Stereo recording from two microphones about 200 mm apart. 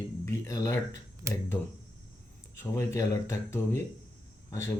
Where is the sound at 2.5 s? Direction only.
15° left (ahead or behind).